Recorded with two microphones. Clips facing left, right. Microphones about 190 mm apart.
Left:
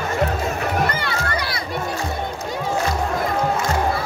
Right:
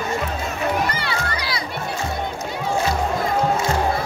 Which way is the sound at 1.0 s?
55° left (ahead or behind).